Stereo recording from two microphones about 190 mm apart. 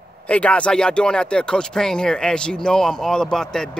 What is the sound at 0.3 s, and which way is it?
Speech, 5° left (ahead or behind).